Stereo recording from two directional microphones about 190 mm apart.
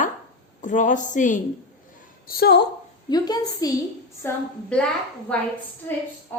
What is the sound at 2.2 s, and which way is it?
Speech, 55° left (ahead or behind).